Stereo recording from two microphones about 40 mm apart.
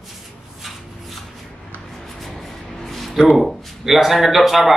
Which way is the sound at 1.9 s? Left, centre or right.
Centre.